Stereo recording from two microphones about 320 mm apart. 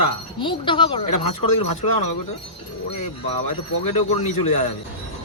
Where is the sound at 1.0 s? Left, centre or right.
Left.